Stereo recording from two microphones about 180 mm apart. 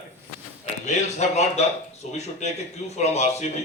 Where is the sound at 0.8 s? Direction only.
40° left (ahead or behind).